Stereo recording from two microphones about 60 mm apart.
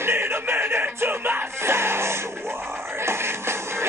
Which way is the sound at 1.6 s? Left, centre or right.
Right.